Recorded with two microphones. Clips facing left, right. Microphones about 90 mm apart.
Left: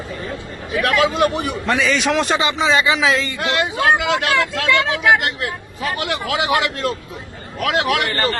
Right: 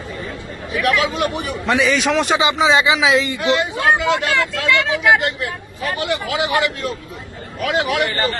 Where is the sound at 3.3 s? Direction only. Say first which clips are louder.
Right 1 dB; 90° left.